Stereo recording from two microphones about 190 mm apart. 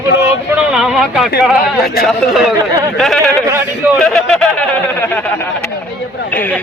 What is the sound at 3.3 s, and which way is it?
Speech, 15° right (ahead or behind).